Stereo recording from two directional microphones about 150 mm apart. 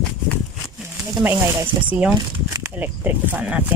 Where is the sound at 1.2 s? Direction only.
10° right (ahead or behind).